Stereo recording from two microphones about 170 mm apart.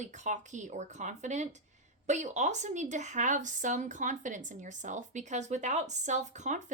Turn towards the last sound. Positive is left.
turn(degrees=-45)  # may be behind; listen again after turning